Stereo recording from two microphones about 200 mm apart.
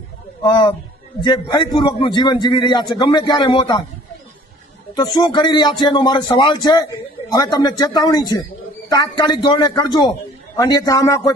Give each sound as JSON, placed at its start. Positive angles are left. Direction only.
{"t": 0.4, "sound": "a man's voice", "side_deg": 20}
{"t": 4.9, "sound": "a man's voice", "side_deg": 20}